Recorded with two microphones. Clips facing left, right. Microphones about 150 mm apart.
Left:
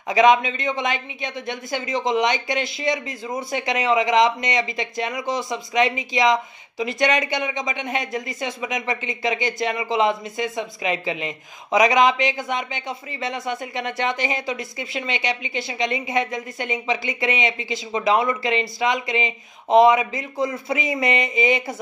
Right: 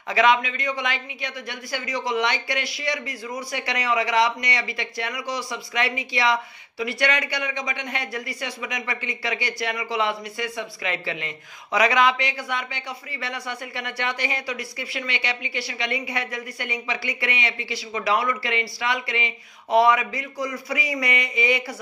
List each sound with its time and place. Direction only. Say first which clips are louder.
0.1 s speech: left 4 dB; 20° left (ahead or behind)